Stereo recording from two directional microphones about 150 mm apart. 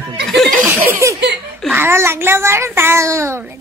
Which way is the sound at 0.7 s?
15° right (ahead or behind).